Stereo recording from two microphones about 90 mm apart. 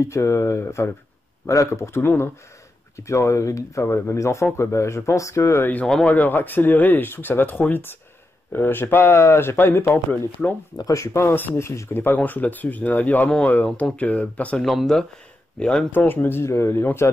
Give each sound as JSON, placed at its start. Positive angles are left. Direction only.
{"t": 0.0, "sound": "speech", "side_deg": 30}
{"t": 6.0, "sound": "speech", "side_deg": 20}
{"t": 10.8, "sound": "speech", "side_deg": 35}
{"t": 14.6, "sound": "speech", "side_deg": 0}
{"t": 15.9, "sound": "speech", "side_deg": 20}